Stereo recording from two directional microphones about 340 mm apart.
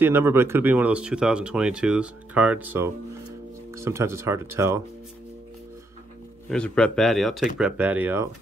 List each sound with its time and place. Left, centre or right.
0.0 s speech: centre
6.5 s speech: centre